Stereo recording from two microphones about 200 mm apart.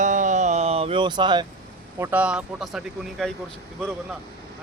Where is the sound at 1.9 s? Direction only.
10° right (ahead or behind).